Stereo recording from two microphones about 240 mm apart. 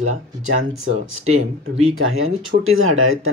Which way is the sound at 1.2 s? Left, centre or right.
Right.